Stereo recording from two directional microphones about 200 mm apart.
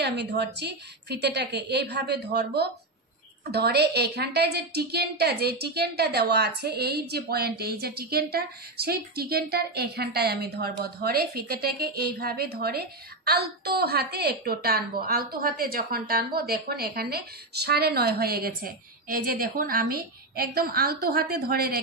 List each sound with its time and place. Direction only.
0.0 s a woman's voice: 55° right (ahead or behind)